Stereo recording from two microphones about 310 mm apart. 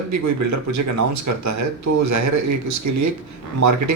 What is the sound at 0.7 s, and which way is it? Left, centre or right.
Speech, right.